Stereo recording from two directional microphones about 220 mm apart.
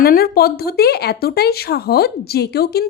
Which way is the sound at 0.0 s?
45° left (ahead or behind).